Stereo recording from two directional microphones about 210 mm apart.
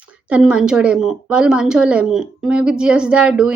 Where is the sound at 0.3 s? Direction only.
5° right (ahead or behind).